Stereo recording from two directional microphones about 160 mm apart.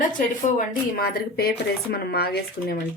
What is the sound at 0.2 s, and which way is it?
Speech, 55° left (ahead or behind).